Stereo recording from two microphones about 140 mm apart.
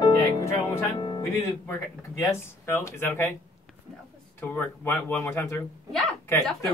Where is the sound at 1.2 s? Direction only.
25° left (ahead or behind).